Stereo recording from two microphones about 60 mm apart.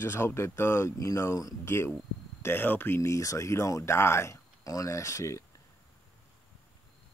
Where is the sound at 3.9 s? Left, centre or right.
Left.